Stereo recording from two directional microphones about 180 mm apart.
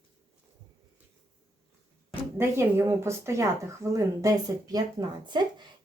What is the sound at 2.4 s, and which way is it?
A woman's voice, 15° right (ahead or behind).